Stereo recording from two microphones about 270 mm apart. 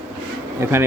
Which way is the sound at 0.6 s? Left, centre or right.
Centre.